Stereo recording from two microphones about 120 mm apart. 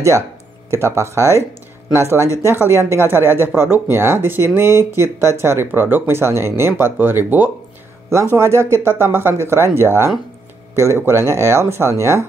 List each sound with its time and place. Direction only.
0.7 s speech: 25° right (ahead or behind)